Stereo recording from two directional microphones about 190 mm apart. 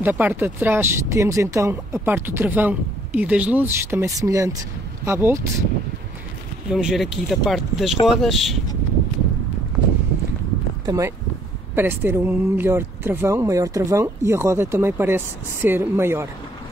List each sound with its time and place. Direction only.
0.0 s speech: 10° right (ahead or behind)
6.7 s speech: 5° right (ahead or behind)
10.9 s speech: 15° right (ahead or behind)